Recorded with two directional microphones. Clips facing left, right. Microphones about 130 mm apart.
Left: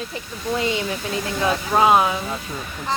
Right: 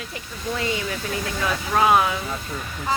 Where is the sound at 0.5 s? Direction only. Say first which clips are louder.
Left 3 dB; 20° left (ahead or behind).